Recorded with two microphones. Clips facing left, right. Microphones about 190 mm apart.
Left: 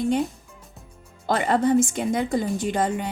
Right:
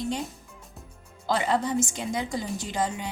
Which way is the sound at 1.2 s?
55° left (ahead or behind).